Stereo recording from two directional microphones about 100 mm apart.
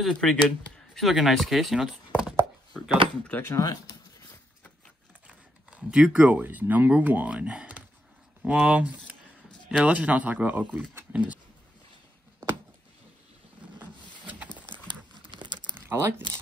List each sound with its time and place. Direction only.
0.0 s speech: 10° left (ahead or behind); by 2.3 s 5° right (ahead or behind)
3.3 s speech: 20° left (ahead or behind)
3.5 s speech: 35° left (ahead or behind)
5.2 s speech: 10° right (ahead or behind)
13.7 s rub: 15° right (ahead or behind)
14.9 s crumpling: 50° right (ahead or behind)
15.7 s a sound: 25° right (ahead or behind)